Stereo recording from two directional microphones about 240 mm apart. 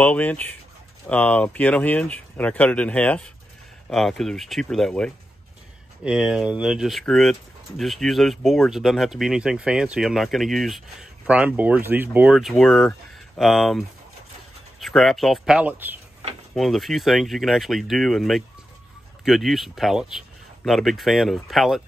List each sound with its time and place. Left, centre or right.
0.0 s speech: centre